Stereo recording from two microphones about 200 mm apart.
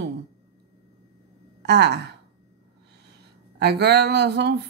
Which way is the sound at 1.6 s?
55° right (ahead or behind).